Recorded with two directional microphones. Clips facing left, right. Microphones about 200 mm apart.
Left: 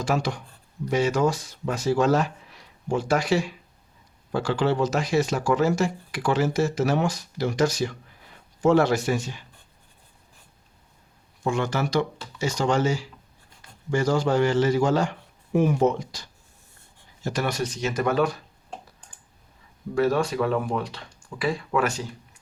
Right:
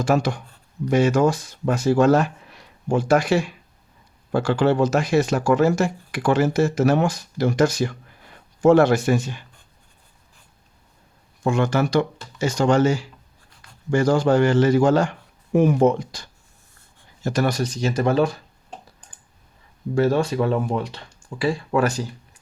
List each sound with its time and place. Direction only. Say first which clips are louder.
0.0 s speech: right 5 dB; 50° right (ahead or behind)
11.4 s a man's voice: right 5 dB; 55° right (ahead or behind)
17.2 s speech: right 5 dB; 40° right (ahead or behind)
20.0 s speech: right 3 dB; 25° right (ahead or behind)